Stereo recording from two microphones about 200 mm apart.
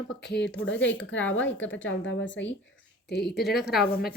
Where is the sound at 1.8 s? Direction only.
70° left (ahead or behind).